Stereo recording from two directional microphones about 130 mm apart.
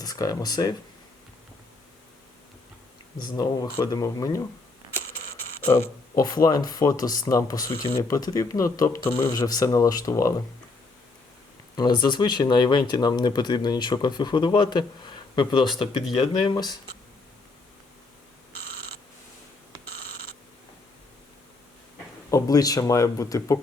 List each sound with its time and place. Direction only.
0.0 s speech: 30° left (ahead or behind)
3.2 s speech: 30° left (ahead or behind)
5.6 s speech: 15° left (ahead or behind)
6.3 s speech: 30° left (ahead or behind)
11.8 s speech: 35° left (ahead or behind)
22.3 s speech: 25° left (ahead or behind)